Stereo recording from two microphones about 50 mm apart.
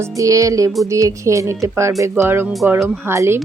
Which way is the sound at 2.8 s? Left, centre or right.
Right.